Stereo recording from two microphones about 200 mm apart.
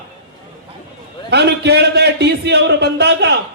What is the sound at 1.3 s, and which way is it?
A man's voice, 55° right (ahead or behind).